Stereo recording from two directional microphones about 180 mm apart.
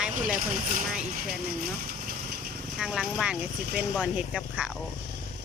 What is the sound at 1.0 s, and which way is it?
Vehicle, 45° right (ahead or behind).